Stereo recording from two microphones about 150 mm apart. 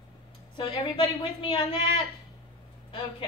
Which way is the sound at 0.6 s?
30° left (ahead or behind).